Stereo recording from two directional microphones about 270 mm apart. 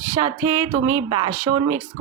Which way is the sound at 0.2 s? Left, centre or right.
Centre.